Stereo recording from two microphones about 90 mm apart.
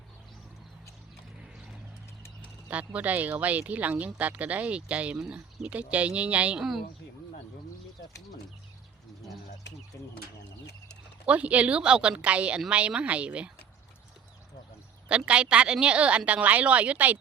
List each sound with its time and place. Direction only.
2.6 s speech: 15° right (ahead or behind)
11.3 s speech: 15° right (ahead or behind)
15.1 s speech: 10° right (ahead or behind)